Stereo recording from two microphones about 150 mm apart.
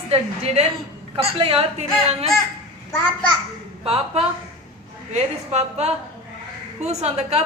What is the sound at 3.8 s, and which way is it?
A woman's voice, 40° right (ahead or behind).